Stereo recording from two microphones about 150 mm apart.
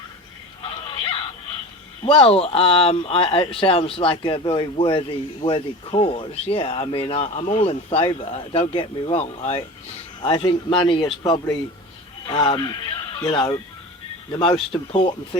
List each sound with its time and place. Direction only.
2.0 s speech: 35° left (ahead or behind)
10.2 s speech: 35° left (ahead or behind)